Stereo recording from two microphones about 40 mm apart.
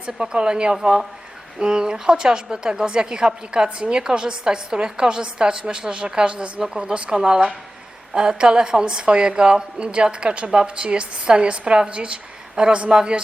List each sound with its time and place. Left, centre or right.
0.2 s a woman's voice: right